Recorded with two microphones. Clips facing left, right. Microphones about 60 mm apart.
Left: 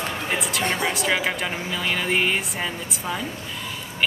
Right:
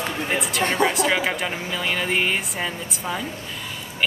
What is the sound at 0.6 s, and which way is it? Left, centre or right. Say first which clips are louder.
Speech: right 6 dB; right.